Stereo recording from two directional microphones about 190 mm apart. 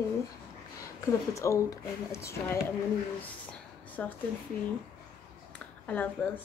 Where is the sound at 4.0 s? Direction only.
5° left (ahead or behind).